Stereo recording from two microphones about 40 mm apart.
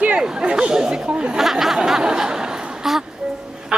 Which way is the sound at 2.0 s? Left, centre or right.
Centre.